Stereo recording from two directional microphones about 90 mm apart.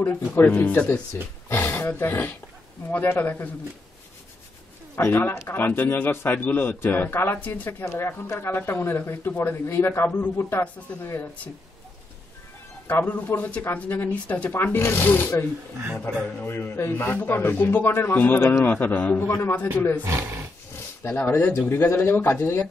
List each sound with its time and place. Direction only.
0.0 s a man's voice: 20° left (ahead or behind)
4.9 s a man's voice: 25° left (ahead or behind)
7.8 s a man's voice: 30° left (ahead or behind)
13.0 s a man's voice: 20° left (ahead or behind)
20.0 s speech: 25° right (ahead or behind)
21.0 s a man's voice: 25° left (ahead or behind)